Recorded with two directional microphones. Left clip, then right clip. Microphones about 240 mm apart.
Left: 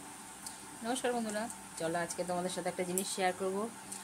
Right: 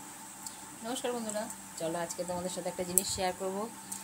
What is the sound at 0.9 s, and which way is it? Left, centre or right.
Speech, centre.